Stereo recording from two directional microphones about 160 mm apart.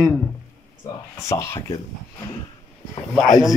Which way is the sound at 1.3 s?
15° left (ahead or behind).